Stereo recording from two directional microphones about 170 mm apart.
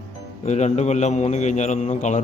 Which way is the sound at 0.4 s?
40° left (ahead or behind).